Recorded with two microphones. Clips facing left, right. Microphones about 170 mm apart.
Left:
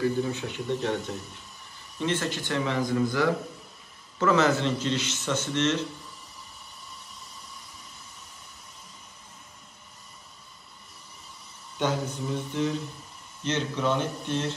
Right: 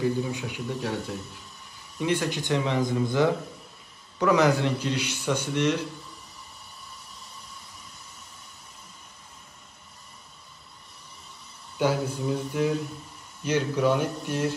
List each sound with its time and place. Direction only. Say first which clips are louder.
0.0 s a man's voice: even; 15° right (ahead or behind)
11.8 s a man's voice: right 3 dB; 10° right (ahead or behind)